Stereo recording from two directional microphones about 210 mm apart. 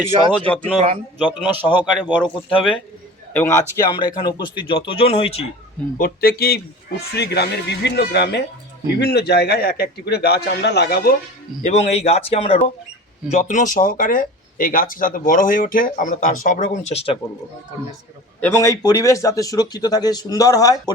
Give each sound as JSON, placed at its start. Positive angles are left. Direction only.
{"t": 0.3, "sound": "a man's voice", "side_deg": 5}
{"t": 1.2, "sound": "a man's voice", "side_deg": -5}
{"t": 3.3, "sound": "speech", "side_deg": 10}
{"t": 6.0, "sound": "a man's voice", "side_deg": 45}
{"t": 11.6, "sound": "speech", "side_deg": 30}
{"t": 18.3, "sound": "speech", "side_deg": 10}